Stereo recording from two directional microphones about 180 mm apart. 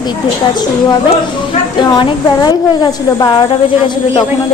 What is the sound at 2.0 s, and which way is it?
A woman's voice, 25° left (ahead or behind).